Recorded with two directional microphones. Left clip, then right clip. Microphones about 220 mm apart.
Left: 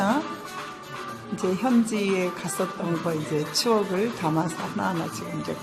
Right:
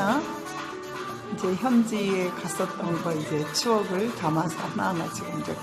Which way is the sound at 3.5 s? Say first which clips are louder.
Left 2 dB; 15° left (ahead or behind).